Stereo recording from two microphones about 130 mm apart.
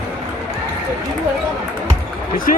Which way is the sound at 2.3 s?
90° left.